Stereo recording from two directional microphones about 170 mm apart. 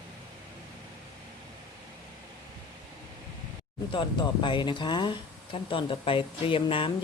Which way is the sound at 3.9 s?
30° left (ahead or behind).